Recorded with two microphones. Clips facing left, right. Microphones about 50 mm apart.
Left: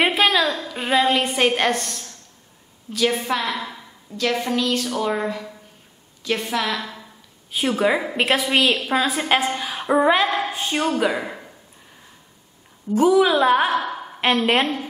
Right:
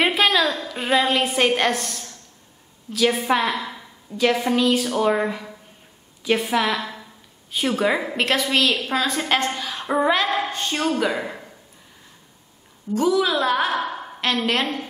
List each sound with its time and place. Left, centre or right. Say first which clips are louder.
0.0 s a sound: left 1 dB; centre
0.7 s a woman's voice: left 1 dB; centre
3.3 s a woman's voice: right 3 dB; centre
3.6 s a sound: even; centre
4.2 s a woman's voice: right 3 dB; centre
7.5 s a woman's voice: left 1 dB; centre
12.9 s a woman's voice: left 4 dB; left
13.7 s a sound: left 2 dB; centre
14.2 s a woman's voice: left 3 dB; left